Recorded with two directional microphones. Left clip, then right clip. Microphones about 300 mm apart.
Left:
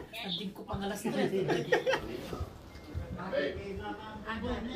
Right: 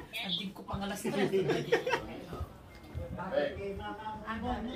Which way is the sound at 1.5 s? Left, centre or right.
Centre.